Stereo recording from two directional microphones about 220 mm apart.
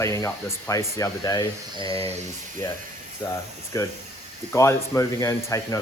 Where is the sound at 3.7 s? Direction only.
15° left (ahead or behind).